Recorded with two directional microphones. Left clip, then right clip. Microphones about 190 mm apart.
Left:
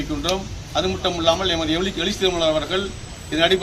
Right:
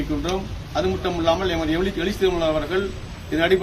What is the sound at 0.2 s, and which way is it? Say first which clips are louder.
A man's voice: left 2 dB; centre (ahead or behind).